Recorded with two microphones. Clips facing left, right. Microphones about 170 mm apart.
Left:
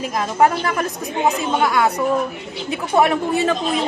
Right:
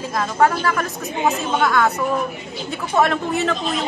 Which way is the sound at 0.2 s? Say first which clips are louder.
Left 1 dB; 20° left (ahead or behind).